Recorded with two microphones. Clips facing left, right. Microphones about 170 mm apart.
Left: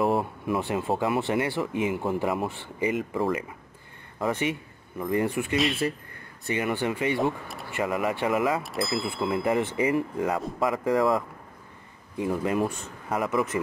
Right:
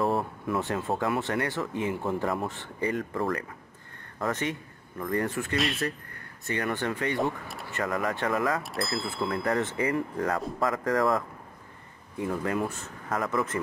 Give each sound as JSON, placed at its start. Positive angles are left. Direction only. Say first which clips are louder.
{"t": 0.2, "sound": "speech", "louder": "left 2 dB", "side_deg": 15}
{"t": 5.6, "sound": "speech", "louder": "left 3 dB", "side_deg": 0}
{"t": 8.5, "sound": "speech", "louder": "left 3 dB", "side_deg": 0}
{"t": 9.3, "sound": "speech", "louder": "left 3 dB", "side_deg": 20}
{"t": 10.1, "sound": "speech", "louder": "left 2 dB", "side_deg": 5}
{"t": 12.2, "sound": "speech", "louder": "left 3 dB", "side_deg": 20}